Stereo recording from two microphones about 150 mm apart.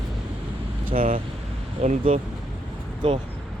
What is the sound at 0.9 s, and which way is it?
Speech, 70° right (ahead or behind).